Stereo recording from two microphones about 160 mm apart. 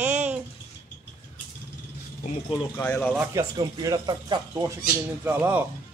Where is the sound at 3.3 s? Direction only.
20° right (ahead or behind).